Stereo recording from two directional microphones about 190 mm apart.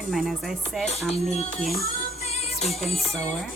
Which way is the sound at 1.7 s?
50° left (ahead or behind).